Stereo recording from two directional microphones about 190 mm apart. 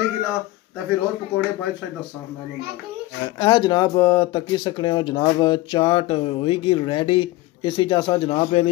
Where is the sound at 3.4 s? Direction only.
25° left (ahead or behind).